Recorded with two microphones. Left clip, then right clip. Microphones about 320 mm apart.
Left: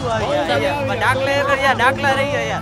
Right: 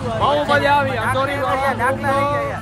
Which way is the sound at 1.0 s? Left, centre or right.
Left.